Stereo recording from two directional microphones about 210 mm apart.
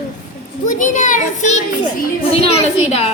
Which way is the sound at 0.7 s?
40° left (ahead or behind).